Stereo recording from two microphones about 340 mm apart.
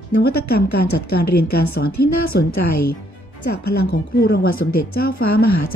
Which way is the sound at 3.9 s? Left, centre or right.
Left.